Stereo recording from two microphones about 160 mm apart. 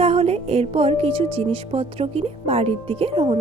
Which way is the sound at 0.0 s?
40° right (ahead or behind).